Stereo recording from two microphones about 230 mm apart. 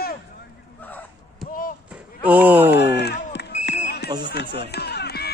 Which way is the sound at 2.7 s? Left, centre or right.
Left.